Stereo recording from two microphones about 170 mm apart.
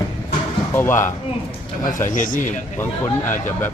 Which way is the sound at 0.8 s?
15° left (ahead or behind).